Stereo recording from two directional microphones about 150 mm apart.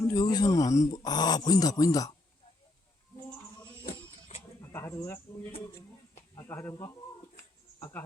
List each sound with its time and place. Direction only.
0.1 s speech: 25° left (ahead or behind)
4.3 s bird: 50° left (ahead or behind)
4.6 s speech: 15° left (ahead or behind)
7.3 s a sound: 15° left (ahead or behind)